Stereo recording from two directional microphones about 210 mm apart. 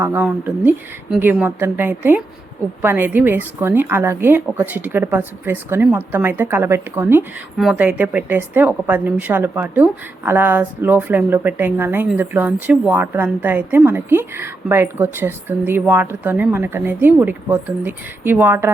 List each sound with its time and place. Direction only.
0.0 s a woman's voice: 10° right (ahead or behind)